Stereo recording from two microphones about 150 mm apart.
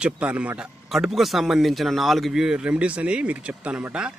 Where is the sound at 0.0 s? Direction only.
10° right (ahead or behind).